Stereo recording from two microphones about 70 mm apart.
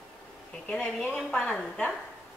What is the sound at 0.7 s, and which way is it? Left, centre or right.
Speech, centre.